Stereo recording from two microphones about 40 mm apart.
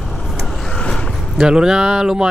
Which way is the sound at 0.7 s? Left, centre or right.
Centre.